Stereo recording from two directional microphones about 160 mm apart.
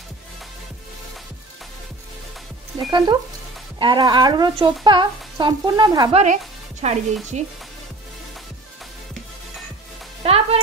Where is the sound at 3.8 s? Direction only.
30° right (ahead or behind).